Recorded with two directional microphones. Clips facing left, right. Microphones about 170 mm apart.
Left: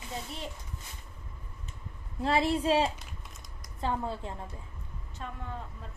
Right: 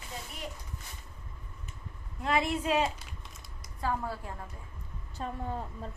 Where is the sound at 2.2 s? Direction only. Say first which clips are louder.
Left 3 dB; 30° left (ahead or behind).